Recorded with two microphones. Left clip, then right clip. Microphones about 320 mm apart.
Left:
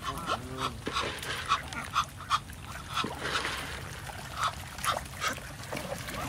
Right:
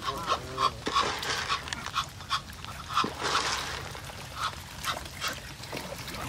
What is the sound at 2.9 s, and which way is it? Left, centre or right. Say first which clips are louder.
Dog: right 4 dB; centre.